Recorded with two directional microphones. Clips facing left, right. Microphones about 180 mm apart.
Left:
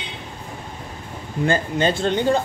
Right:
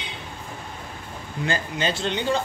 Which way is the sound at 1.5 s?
50° left (ahead or behind).